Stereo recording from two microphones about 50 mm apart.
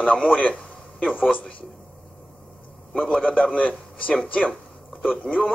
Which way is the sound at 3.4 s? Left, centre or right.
Left.